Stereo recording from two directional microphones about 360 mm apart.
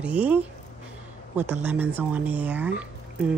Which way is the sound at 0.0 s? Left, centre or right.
Centre.